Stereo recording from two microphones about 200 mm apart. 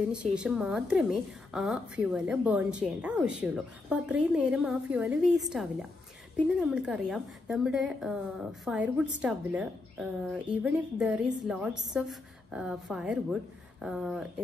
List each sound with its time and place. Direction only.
0.1 s a woman's voice: 5° right (ahead or behind)